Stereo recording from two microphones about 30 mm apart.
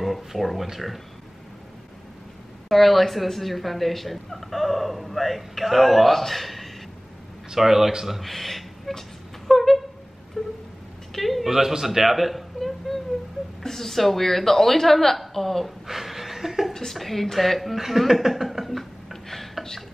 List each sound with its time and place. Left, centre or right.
0.0 s speech: centre
2.7 s speech: centre
7.5 s speech: centre
8.2 s speech: centre
9.5 s a sound: centre
10.4 s music: centre
11.1 s a man's voice: centre
11.8 s a sound: centre
13.6 s speech: centre
15.9 s chuckle: centre
16.7 s speech: centre
19.2 s a sound: centre